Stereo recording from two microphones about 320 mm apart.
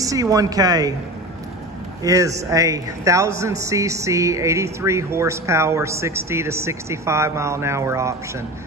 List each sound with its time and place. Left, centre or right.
0.0 s a man's voice: centre
2.0 s a man's voice: centre